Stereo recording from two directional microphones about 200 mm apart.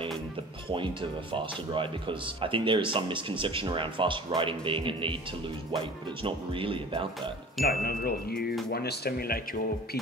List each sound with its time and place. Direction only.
0.7 s speech: 25° right (ahead or behind)
6.2 s speech: 25° right (ahead or behind)
7.6 s speech: 50° left (ahead or behind)